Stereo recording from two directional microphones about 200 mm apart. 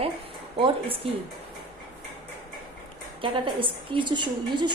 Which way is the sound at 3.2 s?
25° right (ahead or behind).